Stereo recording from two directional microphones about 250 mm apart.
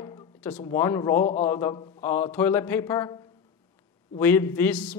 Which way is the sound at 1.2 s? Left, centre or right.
Left.